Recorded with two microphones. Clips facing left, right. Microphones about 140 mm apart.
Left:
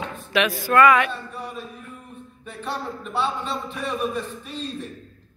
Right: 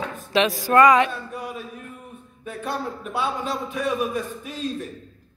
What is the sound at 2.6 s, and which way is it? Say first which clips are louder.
Speech: right 1 dB; 10° right (ahead or behind).